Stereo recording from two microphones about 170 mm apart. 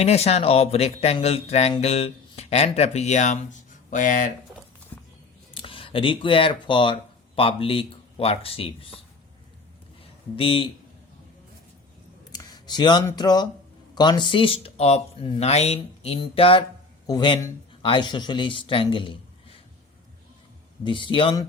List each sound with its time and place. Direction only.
0.0 s speech: 40° left (ahead or behind)
5.5 s speech: 30° left (ahead or behind)
10.3 s speech: 35° left (ahead or behind)
12.3 s a sound: 20° left (ahead or behind)
13.1 s a man's voice: 25° left (ahead or behind)
20.8 s speech: 30° left (ahead or behind)